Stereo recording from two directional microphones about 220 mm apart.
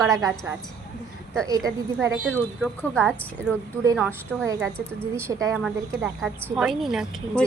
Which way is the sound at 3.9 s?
5° right (ahead or behind).